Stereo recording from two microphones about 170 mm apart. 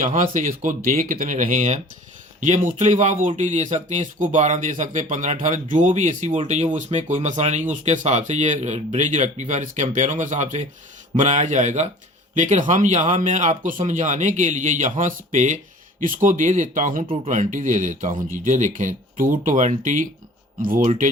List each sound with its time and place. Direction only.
0.0 s speech: 50° right (ahead or behind)